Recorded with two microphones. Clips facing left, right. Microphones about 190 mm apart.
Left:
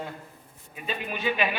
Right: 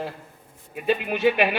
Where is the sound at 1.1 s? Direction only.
55° right (ahead or behind).